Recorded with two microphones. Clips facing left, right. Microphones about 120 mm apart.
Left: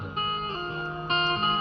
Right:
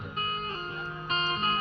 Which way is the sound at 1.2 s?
60° left (ahead or behind).